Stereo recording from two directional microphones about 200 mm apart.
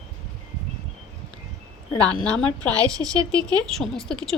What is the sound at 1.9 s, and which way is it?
Speech, 5° left (ahead or behind).